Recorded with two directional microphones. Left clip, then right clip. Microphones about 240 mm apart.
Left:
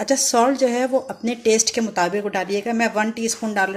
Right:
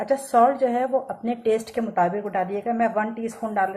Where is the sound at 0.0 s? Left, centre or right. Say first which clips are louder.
Left 1 dB; left.